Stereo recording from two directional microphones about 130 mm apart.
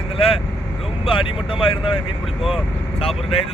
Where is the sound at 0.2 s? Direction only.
45° left (ahead or behind).